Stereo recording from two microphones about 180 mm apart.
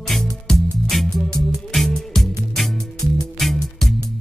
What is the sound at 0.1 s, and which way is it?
Music, centre (ahead or behind).